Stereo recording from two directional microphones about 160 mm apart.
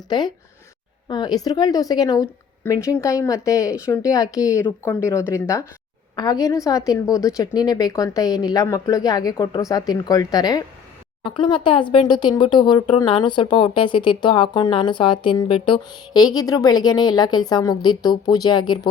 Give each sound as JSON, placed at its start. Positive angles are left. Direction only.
{"t": 0.1, "sound": "speech", "side_deg": 25}